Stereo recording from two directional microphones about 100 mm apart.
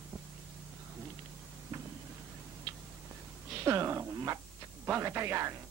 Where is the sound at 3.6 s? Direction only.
30° right (ahead or behind).